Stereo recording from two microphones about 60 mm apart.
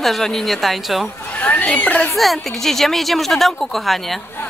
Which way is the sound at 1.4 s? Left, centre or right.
Left.